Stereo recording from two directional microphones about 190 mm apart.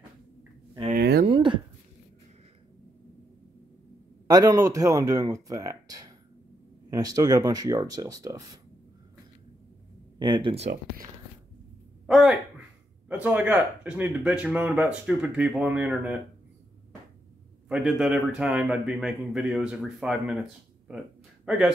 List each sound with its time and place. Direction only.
0.9 s a sound: 55° right (ahead or behind)
1.3 s speech: 25° right (ahead or behind)
4.3 s speech: 20° right (ahead or behind)
10.1 s speech: 25° right (ahead or behind)
12.1 s speech: centre (ahead or behind)
17.6 s a man's voice: 5° right (ahead or behind)
21.5 s a man's voice: 5° right (ahead or behind)